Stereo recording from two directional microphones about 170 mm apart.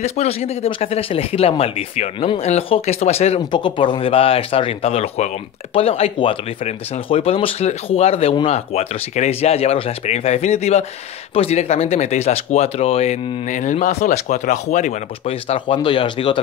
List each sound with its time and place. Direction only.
0.0 s speech: 40° left (ahead or behind)
3.5 s speech: 30° left (ahead or behind)